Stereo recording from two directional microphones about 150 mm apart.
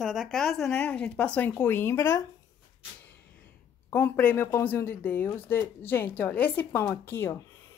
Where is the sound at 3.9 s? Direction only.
10° left (ahead or behind).